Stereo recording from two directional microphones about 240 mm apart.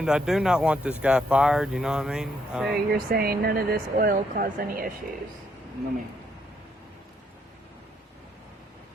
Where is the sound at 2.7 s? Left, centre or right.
Right.